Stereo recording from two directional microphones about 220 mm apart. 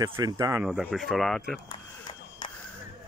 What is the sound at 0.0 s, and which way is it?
Speech, 15° right (ahead or behind).